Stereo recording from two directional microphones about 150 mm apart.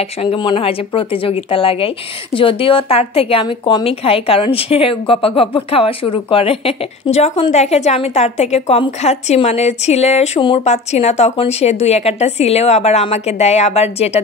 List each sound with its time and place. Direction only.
0.2 s a woman's voice: 35° left (ahead or behind)